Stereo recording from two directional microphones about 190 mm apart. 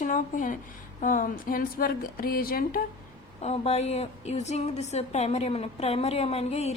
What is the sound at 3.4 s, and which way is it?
A woman's voice, 35° left (ahead or behind).